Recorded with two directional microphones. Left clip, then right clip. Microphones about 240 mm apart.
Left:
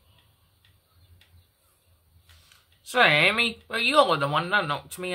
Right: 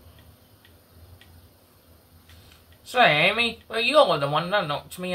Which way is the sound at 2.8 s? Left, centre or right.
Left.